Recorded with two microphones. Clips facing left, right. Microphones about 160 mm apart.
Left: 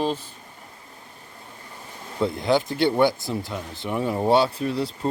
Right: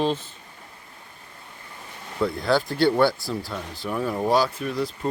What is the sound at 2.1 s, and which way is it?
Speech, 20° left (ahead or behind).